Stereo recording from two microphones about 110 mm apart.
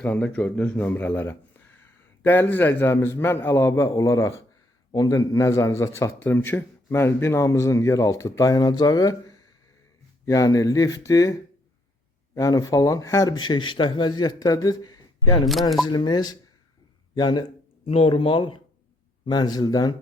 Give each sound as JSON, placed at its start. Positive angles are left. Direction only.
{"t": 0.0, "sound": "a man's voice", "side_deg": 10}
{"t": 17.8, "sound": "speech", "side_deg": 60}